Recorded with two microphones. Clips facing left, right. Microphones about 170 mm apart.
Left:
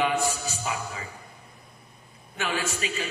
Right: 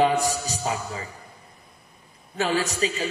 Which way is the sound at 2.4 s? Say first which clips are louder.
Right 6 dB; 35° right (ahead or behind).